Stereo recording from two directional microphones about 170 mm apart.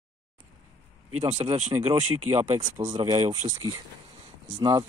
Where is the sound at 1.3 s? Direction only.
40° right (ahead or behind).